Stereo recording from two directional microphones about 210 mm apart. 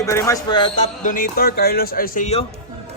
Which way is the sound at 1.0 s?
40° left (ahead or behind).